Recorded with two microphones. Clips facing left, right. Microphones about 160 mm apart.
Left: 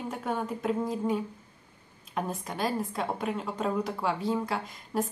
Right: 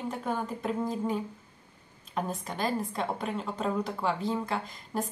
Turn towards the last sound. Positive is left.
turn(degrees=5)  # may be behind; listen again after turning